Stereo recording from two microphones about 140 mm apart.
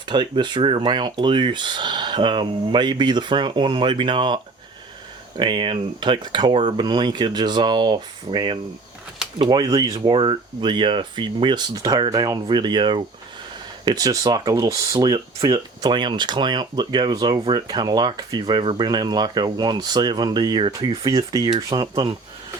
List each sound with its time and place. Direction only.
0.1 s speech: 35° right (ahead or behind)
5.4 s speech: 35° right (ahead or behind)